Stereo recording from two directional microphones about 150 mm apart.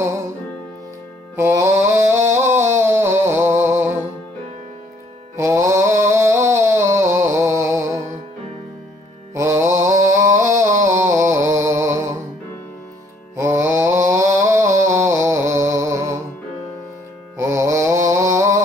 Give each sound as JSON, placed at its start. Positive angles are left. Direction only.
{"t": 1.3, "sound": "music", "side_deg": -15}
{"t": 5.3, "sound": "music", "side_deg": -20}
{"t": 9.3, "sound": "mantra", "side_deg": -20}
{"t": 13.4, "sound": "mantra", "side_deg": -20}
{"t": 17.4, "sound": "music", "side_deg": -20}